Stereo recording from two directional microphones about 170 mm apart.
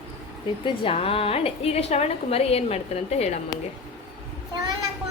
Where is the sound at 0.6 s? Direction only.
30° left (ahead or behind).